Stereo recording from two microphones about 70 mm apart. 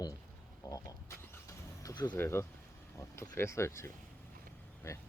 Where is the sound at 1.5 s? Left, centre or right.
Left.